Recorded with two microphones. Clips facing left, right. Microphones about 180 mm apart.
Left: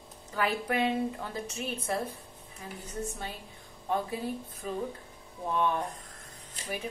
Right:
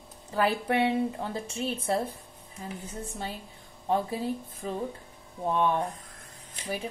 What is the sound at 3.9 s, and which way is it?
Speech, 30° right (ahead or behind).